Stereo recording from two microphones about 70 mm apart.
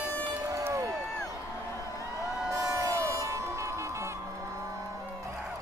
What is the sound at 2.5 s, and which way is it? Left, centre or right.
Music, right.